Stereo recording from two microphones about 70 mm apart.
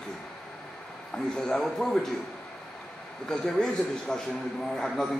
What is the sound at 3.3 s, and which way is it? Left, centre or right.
A man's voice, centre.